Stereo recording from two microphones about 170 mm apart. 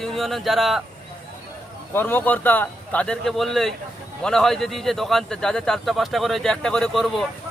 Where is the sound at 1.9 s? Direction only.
10° left (ahead or behind).